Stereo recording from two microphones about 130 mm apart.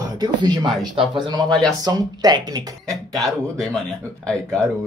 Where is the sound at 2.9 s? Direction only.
5° left (ahead or behind).